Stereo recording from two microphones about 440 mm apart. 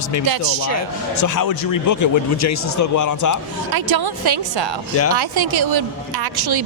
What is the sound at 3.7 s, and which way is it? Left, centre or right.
A woman's voice, right.